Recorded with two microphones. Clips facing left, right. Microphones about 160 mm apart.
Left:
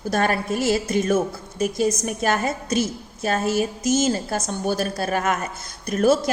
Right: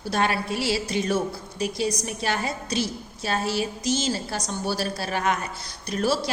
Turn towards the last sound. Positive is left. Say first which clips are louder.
# left 6 dB
turn(degrees=50)  # may be behind; listen again after turning